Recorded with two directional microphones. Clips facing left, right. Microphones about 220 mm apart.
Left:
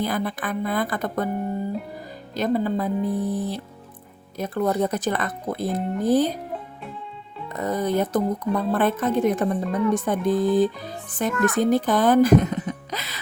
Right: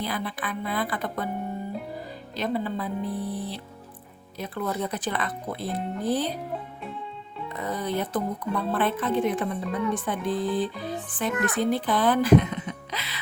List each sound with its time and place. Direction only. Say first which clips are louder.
0.0 s speech: left 5 dB; 45° left (ahead or behind)
2.3 s speech: left 6 dB; 45° left (ahead or behind)
7.5 s speech: left 6 dB; 45° left (ahead or behind)